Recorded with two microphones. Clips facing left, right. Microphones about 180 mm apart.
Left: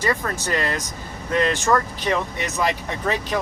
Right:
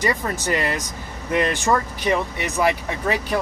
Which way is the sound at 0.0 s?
15° right (ahead or behind).